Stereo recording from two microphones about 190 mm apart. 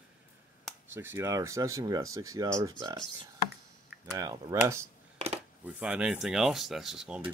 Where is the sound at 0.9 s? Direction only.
10° right (ahead or behind).